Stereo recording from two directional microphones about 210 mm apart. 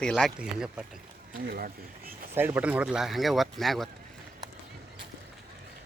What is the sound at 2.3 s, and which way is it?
Speech, 10° right (ahead or behind).